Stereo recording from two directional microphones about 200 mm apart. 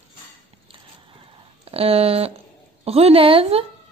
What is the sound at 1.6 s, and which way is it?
A woman's voice, 30° right (ahead or behind).